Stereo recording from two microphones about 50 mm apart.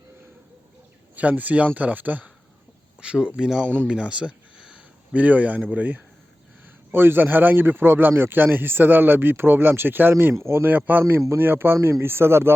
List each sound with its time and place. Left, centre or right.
1.1 s speech: right
3.0 s speech: centre
6.9 s speech: right
10.3 s speech: right
10.7 s speech: right